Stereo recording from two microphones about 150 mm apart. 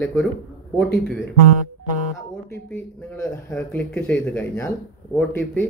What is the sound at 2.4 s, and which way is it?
Speech, 15° left (ahead or behind).